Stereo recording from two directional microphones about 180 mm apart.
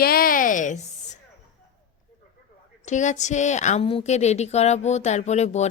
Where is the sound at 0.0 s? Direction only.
55° left (ahead or behind).